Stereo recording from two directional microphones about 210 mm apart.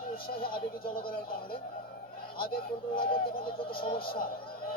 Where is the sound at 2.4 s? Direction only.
45° left (ahead or behind).